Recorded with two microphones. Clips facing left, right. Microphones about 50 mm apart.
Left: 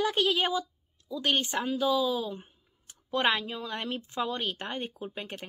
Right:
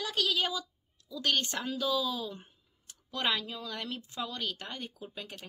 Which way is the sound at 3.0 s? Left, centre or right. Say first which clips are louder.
Left 5 dB; left.